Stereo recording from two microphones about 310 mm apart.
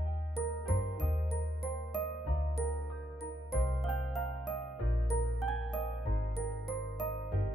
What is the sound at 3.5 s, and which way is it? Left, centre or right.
Music, centre.